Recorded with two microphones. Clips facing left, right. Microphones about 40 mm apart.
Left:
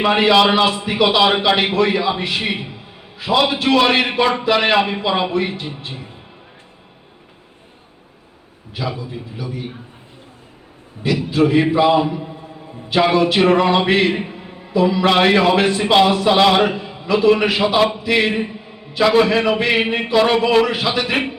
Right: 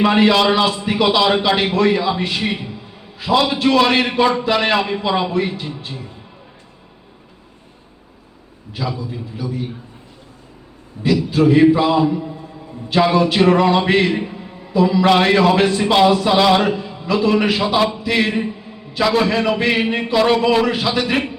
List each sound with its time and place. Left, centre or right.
0.0 s a man's voice: centre
2.4 s a sound: left
3.2 s a man's voice: centre
5.9 s a man's voice: left
8.9 s a man's voice: centre
11.3 s a man's voice: centre
11.9 s a sound: left
12.9 s a man's voice: centre
14.1 s a sound: centre
14.7 s a man's voice: centre